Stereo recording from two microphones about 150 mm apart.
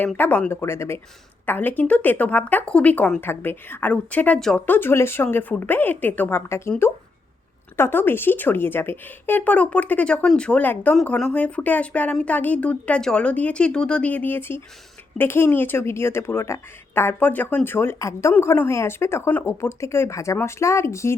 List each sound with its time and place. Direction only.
0.0 s a woman's voice: 10° left (ahead or behind)